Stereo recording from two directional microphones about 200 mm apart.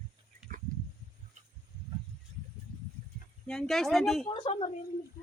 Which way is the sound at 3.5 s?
Centre (ahead or behind).